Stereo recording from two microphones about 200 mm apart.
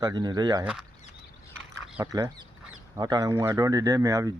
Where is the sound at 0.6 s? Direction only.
5° right (ahead or behind).